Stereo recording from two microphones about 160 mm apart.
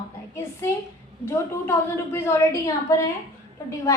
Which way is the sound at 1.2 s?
15° left (ahead or behind).